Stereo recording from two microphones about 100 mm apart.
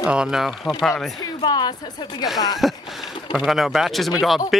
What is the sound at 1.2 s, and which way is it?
Speech, 45° left (ahead or behind).